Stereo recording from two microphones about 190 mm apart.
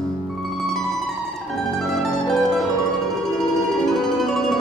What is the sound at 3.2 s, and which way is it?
Music, centre (ahead or behind).